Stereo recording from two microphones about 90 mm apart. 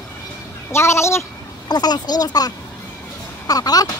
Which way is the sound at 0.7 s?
30° left (ahead or behind).